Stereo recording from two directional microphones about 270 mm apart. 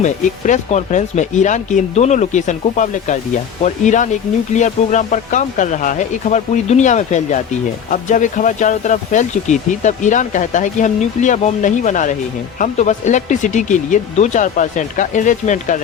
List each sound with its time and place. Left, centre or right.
0.0 s speech: left